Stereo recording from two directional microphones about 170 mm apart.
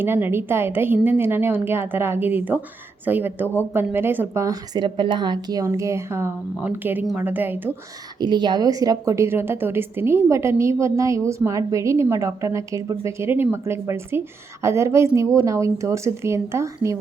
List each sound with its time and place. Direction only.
0.0 s a woman's voice: 15° right (ahead or behind)
8.2 s a woman's voice: 25° right (ahead or behind)